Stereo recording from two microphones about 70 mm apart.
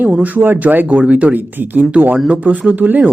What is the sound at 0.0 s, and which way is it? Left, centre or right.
Speech, right.